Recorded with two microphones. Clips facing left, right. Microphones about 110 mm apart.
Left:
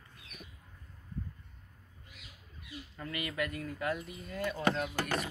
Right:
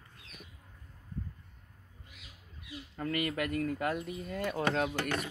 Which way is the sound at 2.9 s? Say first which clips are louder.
Right 5 dB; 50° right (ahead or behind).